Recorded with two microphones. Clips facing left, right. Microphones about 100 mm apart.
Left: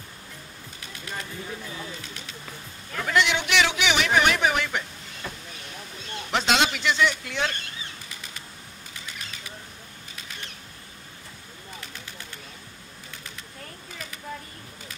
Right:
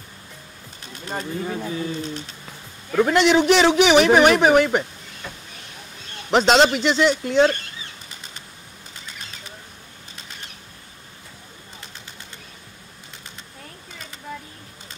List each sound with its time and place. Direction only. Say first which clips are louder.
0.9 s bird: right 6 dB; 35° right (ahead or behind)
1.4 s speech: right 9 dB; 65° right (ahead or behind)
2.0 s a man's voice: right 10 dB; 35° right (ahead or behind)
6.3 s a man's voice: right 8 dB; 35° right (ahead or behind)